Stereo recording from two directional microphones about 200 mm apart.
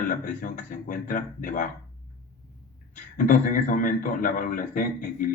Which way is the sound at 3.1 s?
45° left (ahead or behind).